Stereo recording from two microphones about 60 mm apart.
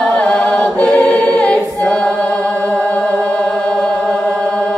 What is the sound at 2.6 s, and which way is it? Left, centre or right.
Music, left.